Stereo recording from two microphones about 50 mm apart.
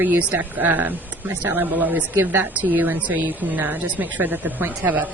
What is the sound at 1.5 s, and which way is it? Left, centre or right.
Speech, right.